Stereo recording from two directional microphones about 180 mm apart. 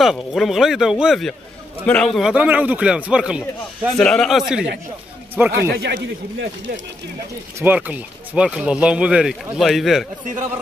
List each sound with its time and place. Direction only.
0.0 s a man's voice: centre (ahead or behind)
5.8 s speech: 70° right (ahead or behind)
7.5 s a man's voice: 10° right (ahead or behind)